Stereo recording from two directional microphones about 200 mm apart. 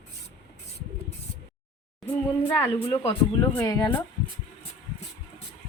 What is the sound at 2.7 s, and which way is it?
Speech, 10° left (ahead or behind).